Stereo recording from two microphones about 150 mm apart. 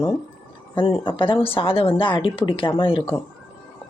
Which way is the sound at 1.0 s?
35° left (ahead or behind).